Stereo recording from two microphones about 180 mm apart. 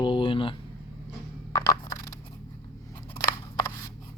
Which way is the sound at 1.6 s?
20° left (ahead or behind).